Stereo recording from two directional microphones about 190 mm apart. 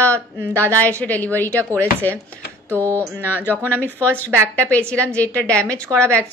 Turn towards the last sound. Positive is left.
turn(degrees=5)  # may be behind; listen again after turning